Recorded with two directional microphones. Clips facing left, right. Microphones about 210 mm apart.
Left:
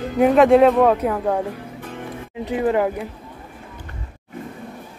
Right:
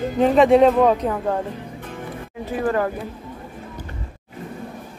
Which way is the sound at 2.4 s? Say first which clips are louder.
Left 2 dB; 20° left (ahead or behind).